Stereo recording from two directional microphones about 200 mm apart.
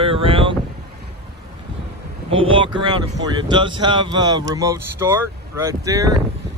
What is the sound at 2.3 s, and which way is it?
Speech, 25° right (ahead or behind).